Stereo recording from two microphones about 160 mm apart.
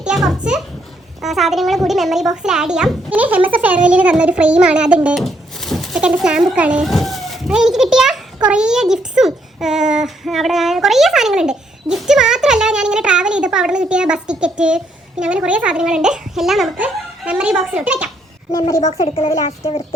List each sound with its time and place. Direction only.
0.0 s a child's voice: centre (ahead or behind)
18.8 s speech: 40° left (ahead or behind)